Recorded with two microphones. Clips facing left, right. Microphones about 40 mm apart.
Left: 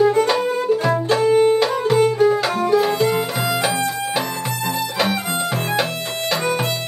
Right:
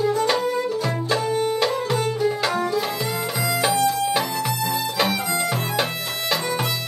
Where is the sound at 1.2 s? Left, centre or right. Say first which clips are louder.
Left 9 dB; left.